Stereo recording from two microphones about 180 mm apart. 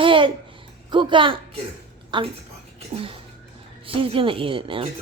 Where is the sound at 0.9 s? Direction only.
25° right (ahead or behind).